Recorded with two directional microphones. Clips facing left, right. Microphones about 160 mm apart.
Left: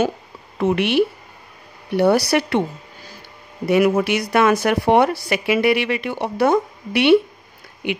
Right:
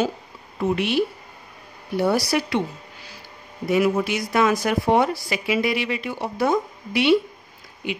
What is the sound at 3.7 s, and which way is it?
A woman's voice, 70° left (ahead or behind).